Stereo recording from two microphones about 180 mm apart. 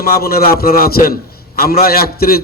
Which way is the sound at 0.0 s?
60° left (ahead or behind).